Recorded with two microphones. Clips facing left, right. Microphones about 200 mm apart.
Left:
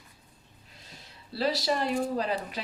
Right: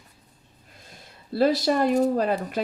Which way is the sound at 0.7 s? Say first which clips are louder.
Right 3 dB; 50° right (ahead or behind).